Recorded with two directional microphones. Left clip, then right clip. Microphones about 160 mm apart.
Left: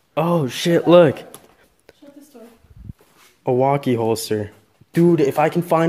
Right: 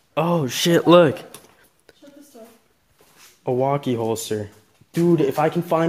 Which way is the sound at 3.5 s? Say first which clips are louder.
Left 4 dB; 20° left (ahead or behind).